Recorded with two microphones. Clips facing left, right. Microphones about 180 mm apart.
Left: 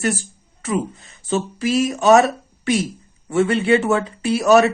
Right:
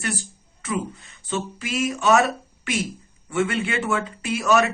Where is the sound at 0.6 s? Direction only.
40° left (ahead or behind).